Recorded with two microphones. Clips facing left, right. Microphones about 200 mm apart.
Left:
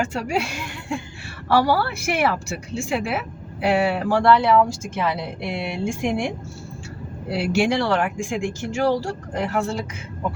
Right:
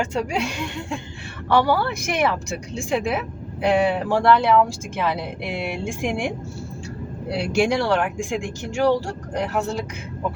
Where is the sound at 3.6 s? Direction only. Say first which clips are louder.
Right 1 dB; 5° left (ahead or behind).